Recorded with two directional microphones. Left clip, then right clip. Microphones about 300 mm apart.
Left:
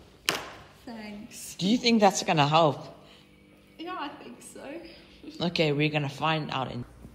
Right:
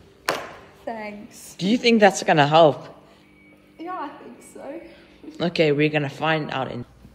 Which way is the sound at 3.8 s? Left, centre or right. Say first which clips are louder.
Right 5 dB; centre.